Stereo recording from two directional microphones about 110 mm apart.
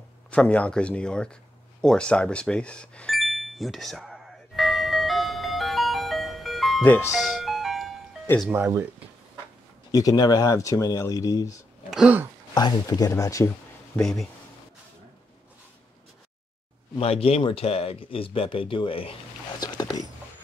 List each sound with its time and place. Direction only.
0.3 s speech: 10° left (ahead or behind)
3.2 s music: centre (ahead or behind)
6.8 s speech: 15° left (ahead or behind)
7.1 s music: centre (ahead or behind)
8.5 s speech: 15° right (ahead or behind)
9.8 s speech: 35° left (ahead or behind)
11.9 s a sound: 5° right (ahead or behind)
12.5 s speech: 40° left (ahead or behind)
13.9 s speech: 5° left (ahead or behind)
17.0 s speech: 65° left (ahead or behind)
19.6 s dog: 35° left (ahead or behind)